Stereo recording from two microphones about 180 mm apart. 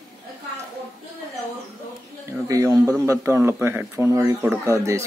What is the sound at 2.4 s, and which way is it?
A man's voice, 20° right (ahead or behind).